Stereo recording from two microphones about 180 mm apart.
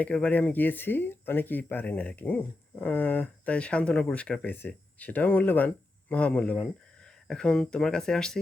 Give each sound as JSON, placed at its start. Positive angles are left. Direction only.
{"t": 0.0, "sound": "speech", "side_deg": 5}